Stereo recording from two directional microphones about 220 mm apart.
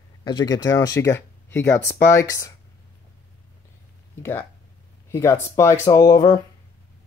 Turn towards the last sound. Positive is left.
turn(degrees=15)  # may be behind; listen again after turning